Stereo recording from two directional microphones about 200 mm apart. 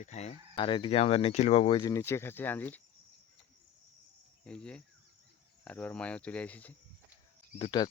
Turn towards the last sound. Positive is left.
turn(degrees=25)  # may be behind; listen again after turning